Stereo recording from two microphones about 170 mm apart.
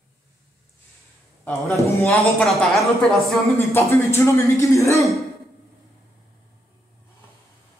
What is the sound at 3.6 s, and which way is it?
Speech, 15° left (ahead or behind).